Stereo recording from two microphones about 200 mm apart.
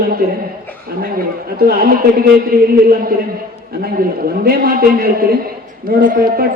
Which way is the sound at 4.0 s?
45° right (ahead or behind).